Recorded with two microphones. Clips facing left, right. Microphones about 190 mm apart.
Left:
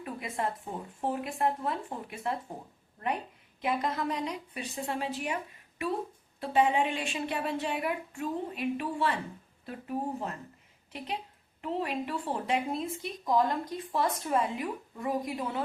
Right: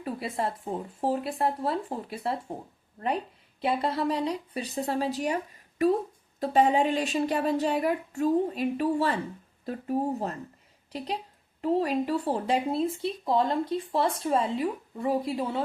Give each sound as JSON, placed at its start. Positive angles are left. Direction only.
{"t": 0.0, "sound": "speech", "side_deg": -30}
{"t": 3.6, "sound": "speech", "side_deg": -30}